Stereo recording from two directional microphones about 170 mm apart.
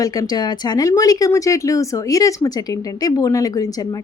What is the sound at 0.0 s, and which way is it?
Speech, 20° left (ahead or behind).